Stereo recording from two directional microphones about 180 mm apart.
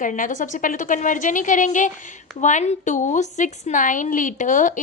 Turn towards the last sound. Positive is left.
turn(degrees=45)  # may be behind; listen again after turning